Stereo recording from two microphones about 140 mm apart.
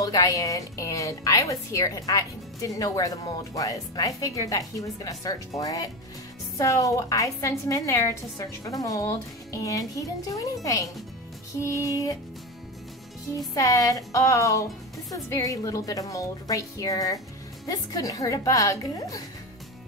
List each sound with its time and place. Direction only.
0.0 s a woman's voice: 25° left (ahead or behind)
13.6 s a woman's voice: 25° left (ahead or behind)